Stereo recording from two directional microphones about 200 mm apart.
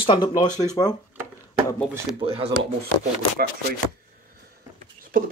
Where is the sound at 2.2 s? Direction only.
30° right (ahead or behind).